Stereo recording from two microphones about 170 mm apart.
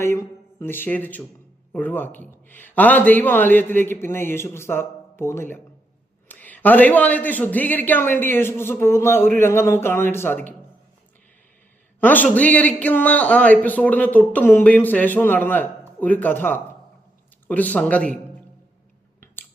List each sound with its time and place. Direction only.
0.0 s a man's voice: 15° left (ahead or behind)
11.9 s a man's voice: 10° left (ahead or behind)